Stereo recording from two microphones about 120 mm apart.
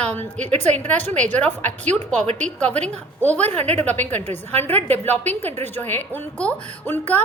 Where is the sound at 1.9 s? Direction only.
65° right (ahead or behind).